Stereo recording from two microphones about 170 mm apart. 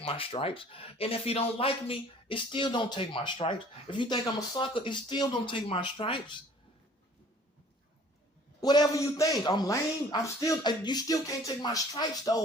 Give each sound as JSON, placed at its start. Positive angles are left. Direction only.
{"t": 0.0, "sound": "speech", "side_deg": 30}
{"t": 8.6, "sound": "a man's voice", "side_deg": 25}